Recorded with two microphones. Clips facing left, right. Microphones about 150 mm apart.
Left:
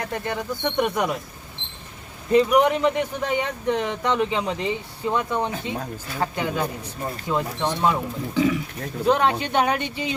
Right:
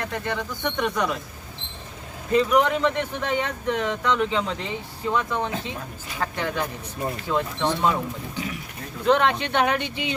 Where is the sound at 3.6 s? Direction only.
30° left (ahead or behind).